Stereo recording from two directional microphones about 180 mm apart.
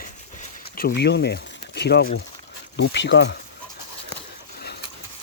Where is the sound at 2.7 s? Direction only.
75° left (ahead or behind).